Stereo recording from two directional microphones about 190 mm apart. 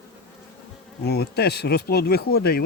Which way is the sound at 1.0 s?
60° left (ahead or behind).